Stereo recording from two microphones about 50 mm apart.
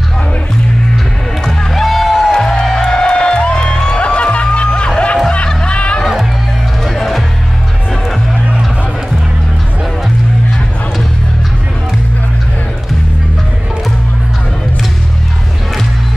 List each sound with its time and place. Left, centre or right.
1.4 s music: centre
2.3 s music: centre
6.8 s music: centre